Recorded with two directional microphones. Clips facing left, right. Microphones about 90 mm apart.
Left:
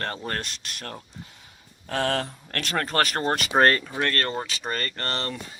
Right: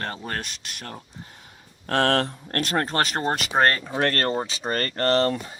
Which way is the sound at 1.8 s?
70° right (ahead or behind).